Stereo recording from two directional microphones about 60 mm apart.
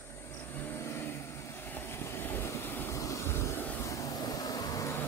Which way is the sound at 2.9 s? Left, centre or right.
Left.